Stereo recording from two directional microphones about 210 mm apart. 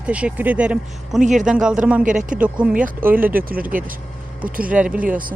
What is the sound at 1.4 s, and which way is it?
Speech, 5° right (ahead or behind).